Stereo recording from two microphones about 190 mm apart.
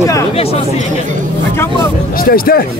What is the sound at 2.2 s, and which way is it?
Speech, 50° left (ahead or behind).